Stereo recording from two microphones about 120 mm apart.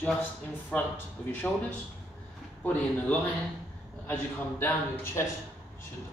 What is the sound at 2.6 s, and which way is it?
A man's voice, 15° left (ahead or behind).